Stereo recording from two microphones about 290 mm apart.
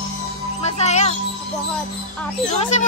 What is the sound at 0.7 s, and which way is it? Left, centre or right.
Speech, left.